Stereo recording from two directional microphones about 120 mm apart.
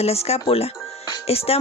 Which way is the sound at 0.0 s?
60° left (ahead or behind).